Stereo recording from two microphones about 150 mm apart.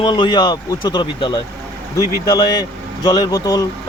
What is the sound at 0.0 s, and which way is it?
Speech, 30° left (ahead or behind).